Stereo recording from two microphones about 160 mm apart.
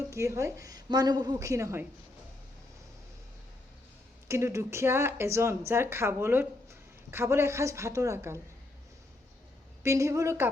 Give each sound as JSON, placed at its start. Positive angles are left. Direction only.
{"t": 0.1, "sound": "a woman's voice", "side_deg": -20}
{"t": 4.3, "sound": "speech", "side_deg": -15}
{"t": 9.8, "sound": "speech", "side_deg": -20}